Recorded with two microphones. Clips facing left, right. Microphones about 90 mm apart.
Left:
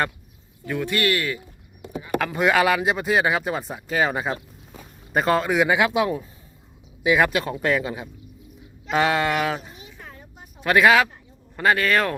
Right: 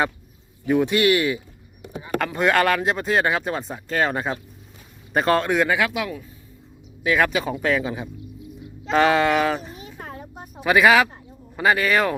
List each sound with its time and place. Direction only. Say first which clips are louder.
0.6 s speech: right 5 dB; 20° right (ahead or behind)
2.1 s speech: even; 5° left (ahead or behind)
5.6 s speech: left 3 dB; 20° left (ahead or behind)
7.0 s speech: left 1 dB; 15° left (ahead or behind)
7.3 s speech: even; centre (ahead or behind)
9.7 s a sound: right 6 dB; 45° right (ahead or behind)
10.6 s speech: right 1 dB; 5° right (ahead or behind)